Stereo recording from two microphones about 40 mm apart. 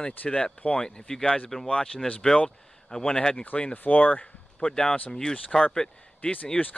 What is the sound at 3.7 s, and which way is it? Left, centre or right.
Speech, left.